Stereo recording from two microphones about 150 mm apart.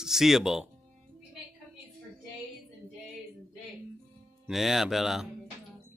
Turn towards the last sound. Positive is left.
turn(degrees=0)  # may be behind; listen again after turning